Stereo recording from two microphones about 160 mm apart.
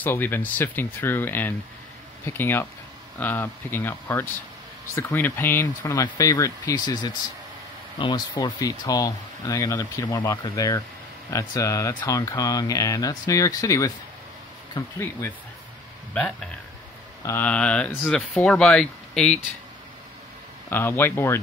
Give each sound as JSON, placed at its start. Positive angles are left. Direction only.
{"t": 0.0, "sound": "speech", "side_deg": 10}
{"t": 15.0, "sound": "speech", "side_deg": 15}
{"t": 17.2, "sound": "speech", "side_deg": 15}
{"t": 20.7, "sound": "speech", "side_deg": 15}